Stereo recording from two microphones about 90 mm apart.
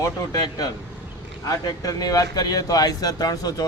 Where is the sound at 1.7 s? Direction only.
45° left (ahead or behind).